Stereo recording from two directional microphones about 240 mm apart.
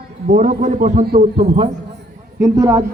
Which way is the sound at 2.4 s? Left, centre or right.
Centre.